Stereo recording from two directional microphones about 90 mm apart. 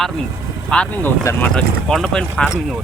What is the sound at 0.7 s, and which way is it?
Speech, 15° left (ahead or behind).